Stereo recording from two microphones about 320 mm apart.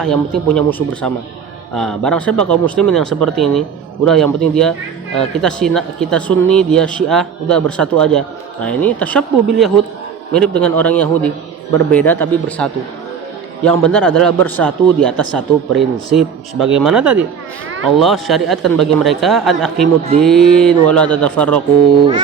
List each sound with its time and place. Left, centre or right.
0.0 s a man's voice: centre